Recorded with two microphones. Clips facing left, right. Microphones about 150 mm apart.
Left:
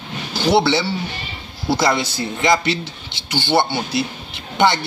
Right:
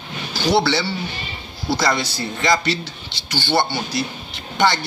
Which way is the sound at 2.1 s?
20° left (ahead or behind).